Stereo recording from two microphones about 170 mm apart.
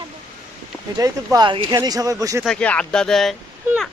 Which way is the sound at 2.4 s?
5° left (ahead or behind).